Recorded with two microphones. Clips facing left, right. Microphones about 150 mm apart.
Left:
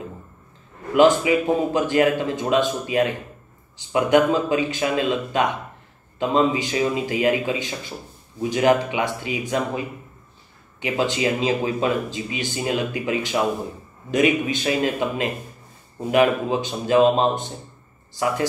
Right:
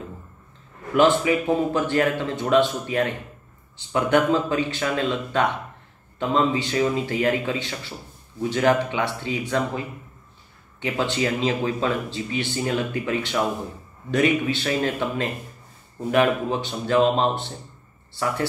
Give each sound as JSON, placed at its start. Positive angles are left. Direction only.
{"t": 0.9, "sound": "speech", "side_deg": 15}